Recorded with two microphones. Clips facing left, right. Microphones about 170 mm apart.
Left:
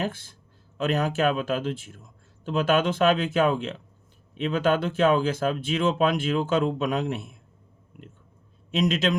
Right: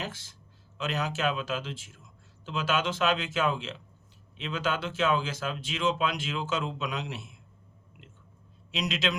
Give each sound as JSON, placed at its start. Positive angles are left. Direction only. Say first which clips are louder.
{"t": 0.0, "sound": "a man's voice", "louder": "left 8 dB", "side_deg": 55}
{"t": 8.7, "sound": "a man's voice", "louder": "left 7 dB", "side_deg": 50}